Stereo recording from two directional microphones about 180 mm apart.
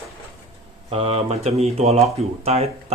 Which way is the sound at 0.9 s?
30° right (ahead or behind).